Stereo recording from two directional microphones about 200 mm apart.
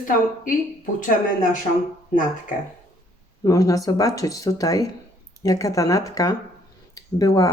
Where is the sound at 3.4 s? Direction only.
15° left (ahead or behind).